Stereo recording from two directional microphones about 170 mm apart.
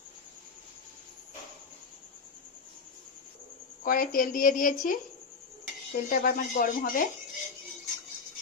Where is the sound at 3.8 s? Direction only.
55° left (ahead or behind).